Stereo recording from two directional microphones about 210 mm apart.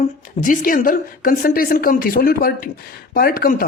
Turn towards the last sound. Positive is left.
turn(degrees=45)  # may be behind; listen again after turning